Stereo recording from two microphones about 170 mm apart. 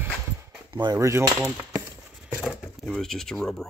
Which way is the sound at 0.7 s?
25° right (ahead or behind).